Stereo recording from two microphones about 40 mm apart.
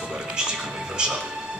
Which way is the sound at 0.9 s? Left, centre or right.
Right.